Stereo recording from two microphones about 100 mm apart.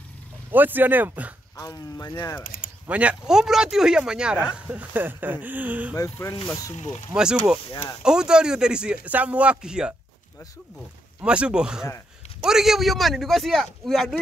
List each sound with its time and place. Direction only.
0.5 s speech: 20° right (ahead or behind)
1.6 s speech: 35° left (ahead or behind)
2.9 s a man's voice: 10° right (ahead or behind)
5.9 s speech: 30° left (ahead or behind)
7.2 s a man's voice: 10° right (ahead or behind)
11.2 s a man's voice: 10° right (ahead or behind)